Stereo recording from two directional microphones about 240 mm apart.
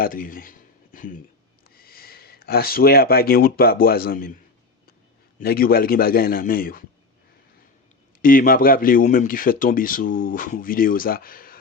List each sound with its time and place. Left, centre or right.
0.0 s speech: left
5.4 s speech: left
8.2 s speech: left